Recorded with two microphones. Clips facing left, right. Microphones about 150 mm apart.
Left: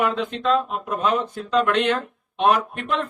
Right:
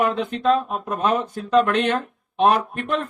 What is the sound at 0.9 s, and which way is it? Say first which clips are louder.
Speech: right 1 dB; 55° right (ahead or behind).